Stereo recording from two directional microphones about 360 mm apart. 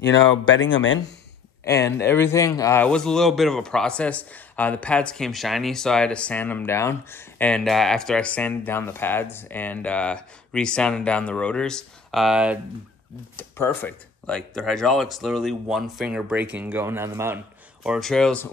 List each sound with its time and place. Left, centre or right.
0.6 s speech: left
1.6 s a man's voice: centre